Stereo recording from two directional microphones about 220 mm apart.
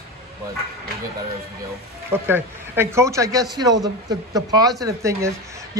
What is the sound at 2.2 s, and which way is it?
A woman's voice, 10° right (ahead or behind).